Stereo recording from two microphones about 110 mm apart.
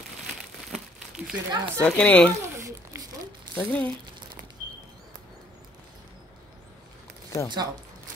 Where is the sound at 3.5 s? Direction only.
15° left (ahead or behind).